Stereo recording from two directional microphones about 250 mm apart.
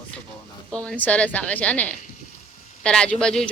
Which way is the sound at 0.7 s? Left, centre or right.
Centre.